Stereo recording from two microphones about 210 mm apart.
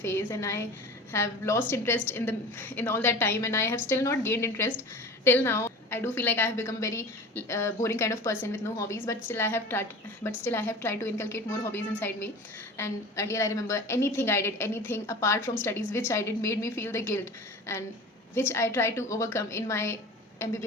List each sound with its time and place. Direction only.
0.0 s a woman's voice: 10° left (ahead or behind)